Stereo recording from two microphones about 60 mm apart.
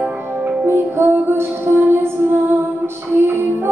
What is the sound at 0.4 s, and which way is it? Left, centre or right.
Music, right.